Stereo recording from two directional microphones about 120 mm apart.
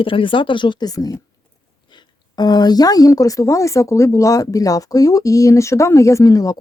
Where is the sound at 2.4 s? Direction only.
35° left (ahead or behind).